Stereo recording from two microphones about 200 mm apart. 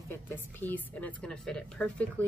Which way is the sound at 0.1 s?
10° left (ahead or behind).